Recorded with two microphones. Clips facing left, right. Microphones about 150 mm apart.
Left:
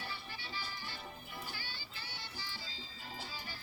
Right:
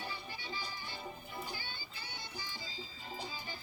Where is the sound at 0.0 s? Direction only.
15° right (ahead or behind).